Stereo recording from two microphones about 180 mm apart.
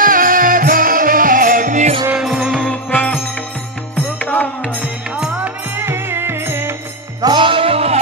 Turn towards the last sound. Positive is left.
turn(degrees=-35)  # may be behind; listen again after turning